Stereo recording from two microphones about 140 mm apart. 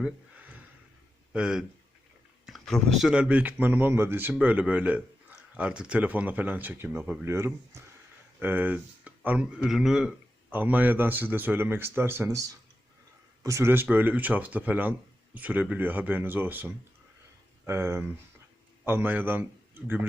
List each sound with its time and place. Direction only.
1.3 s speech: 5° right (ahead or behind)
2.5 s speech: 5° left (ahead or behind); by 19.5 s 15° right (ahead or behind)